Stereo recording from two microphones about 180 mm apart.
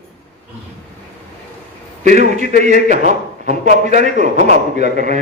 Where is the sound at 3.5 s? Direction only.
40° right (ahead or behind).